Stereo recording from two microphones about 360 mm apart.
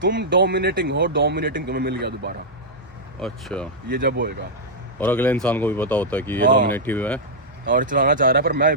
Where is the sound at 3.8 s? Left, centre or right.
Right.